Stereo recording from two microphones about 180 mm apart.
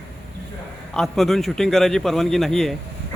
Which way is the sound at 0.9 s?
Centre (ahead or behind).